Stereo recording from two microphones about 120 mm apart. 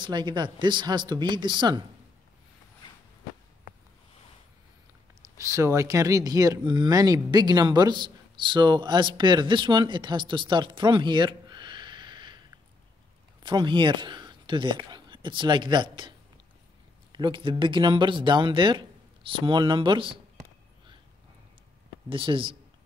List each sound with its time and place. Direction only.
0.0 s speech: 40° right (ahead or behind)
5.4 s speech: 25° right (ahead or behind)
13.4 s speech: 40° right (ahead or behind)
22.1 s speech: 45° right (ahead or behind)